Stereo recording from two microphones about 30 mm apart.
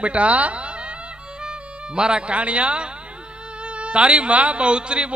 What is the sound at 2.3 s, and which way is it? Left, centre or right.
Speech, right.